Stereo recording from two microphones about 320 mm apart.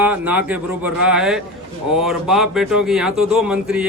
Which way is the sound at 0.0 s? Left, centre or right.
Centre.